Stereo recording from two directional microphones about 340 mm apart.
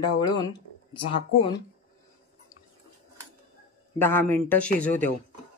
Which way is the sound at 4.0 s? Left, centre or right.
Centre.